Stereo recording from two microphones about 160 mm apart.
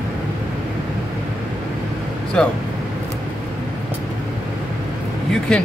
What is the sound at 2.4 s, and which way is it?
Speech, 5° left (ahead or behind).